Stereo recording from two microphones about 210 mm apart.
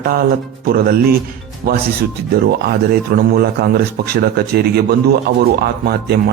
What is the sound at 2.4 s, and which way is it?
A man's voice, 45° right (ahead or behind).